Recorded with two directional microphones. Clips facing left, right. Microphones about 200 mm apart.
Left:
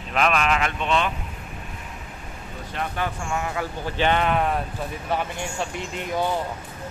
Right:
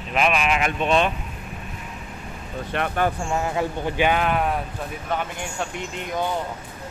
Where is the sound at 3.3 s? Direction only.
25° right (ahead or behind).